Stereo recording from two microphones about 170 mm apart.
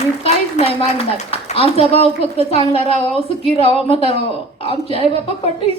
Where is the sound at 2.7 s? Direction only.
35° left (ahead or behind).